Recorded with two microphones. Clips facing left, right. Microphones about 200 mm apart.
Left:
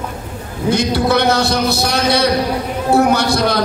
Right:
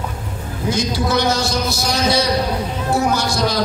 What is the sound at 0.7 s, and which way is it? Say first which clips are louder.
A man's voice: left 5 dB; 60° left (ahead or behind).